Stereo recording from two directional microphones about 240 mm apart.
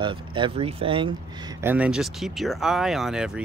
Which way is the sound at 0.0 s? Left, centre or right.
Right.